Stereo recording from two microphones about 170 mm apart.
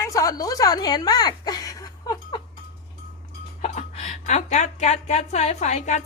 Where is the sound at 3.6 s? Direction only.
40° left (ahead or behind).